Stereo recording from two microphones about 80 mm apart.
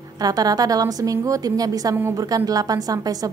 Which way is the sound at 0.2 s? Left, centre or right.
Right.